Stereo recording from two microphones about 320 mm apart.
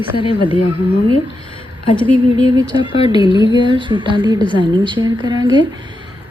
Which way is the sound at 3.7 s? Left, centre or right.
Centre.